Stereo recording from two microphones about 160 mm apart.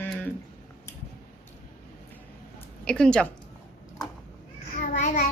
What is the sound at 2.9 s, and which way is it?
Speech, 5° left (ahead or behind).